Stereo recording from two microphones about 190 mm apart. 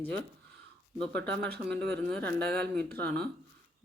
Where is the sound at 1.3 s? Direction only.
60° right (ahead or behind).